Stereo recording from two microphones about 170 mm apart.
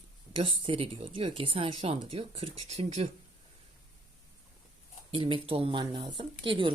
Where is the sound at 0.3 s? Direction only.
30° right (ahead or behind).